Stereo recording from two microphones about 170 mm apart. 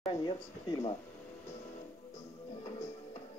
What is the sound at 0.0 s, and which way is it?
Speech, 30° left (ahead or behind).